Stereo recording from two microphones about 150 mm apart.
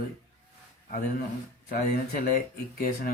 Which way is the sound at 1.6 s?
75° left (ahead or behind).